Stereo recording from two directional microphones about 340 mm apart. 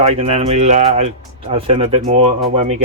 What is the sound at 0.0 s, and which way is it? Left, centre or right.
Speech, centre.